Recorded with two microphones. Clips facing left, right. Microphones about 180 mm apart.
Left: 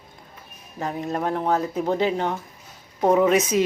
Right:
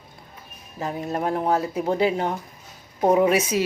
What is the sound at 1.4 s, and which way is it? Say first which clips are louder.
Speech: even; 10° right (ahead or behind).